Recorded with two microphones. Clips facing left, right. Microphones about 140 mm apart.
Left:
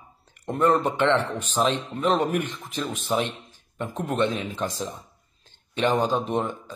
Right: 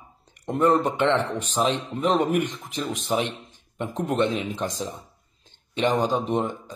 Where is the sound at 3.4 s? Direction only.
20° right (ahead or behind).